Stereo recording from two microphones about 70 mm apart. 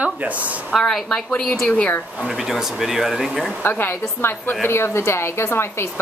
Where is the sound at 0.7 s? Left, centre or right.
Centre.